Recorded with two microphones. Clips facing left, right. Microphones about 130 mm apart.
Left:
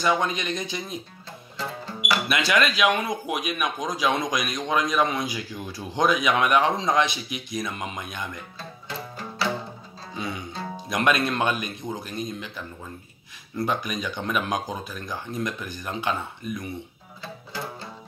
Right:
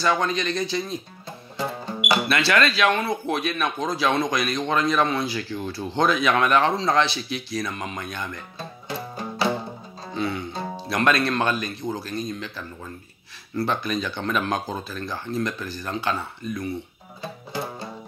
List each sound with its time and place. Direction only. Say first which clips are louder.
0.0 s speech: right 1 dB; 15° left (ahead or behind)
1.6 s music: right 4 dB; 15° right (ahead or behind)
2.2 s speech: even; 15° left (ahead or behind)
8.5 s music: right 3 dB; 20° right (ahead or behind)
10.1 s music: right 5 dB; 15° left (ahead or behind)
10.9 s speech: right 1 dB; 15° left (ahead or behind)
17.2 s music: right 4 dB; 20° right (ahead or behind)